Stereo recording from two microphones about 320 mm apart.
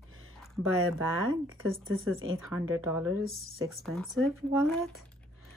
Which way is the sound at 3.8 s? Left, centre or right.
Centre.